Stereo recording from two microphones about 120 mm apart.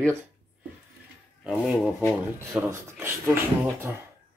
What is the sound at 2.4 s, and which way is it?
Speech, 20° right (ahead or behind).